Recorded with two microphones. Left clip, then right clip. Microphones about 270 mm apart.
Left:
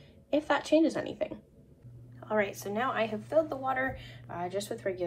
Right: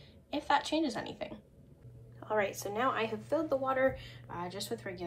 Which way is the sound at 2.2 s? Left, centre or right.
Right.